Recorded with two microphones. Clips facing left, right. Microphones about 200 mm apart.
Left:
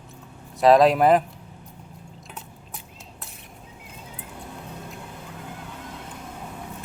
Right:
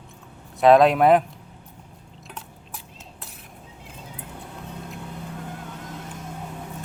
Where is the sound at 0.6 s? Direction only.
Centre (ahead or behind).